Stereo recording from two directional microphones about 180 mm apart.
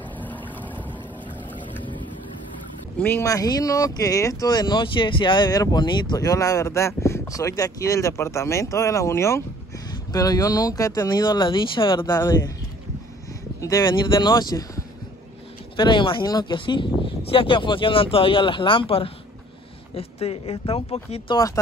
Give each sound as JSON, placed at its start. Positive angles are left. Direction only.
{"t": 0.2, "sound": "boat", "side_deg": 10}
{"t": 3.0, "sound": "speech", "side_deg": 10}
{"t": 13.6, "sound": "speech", "side_deg": 20}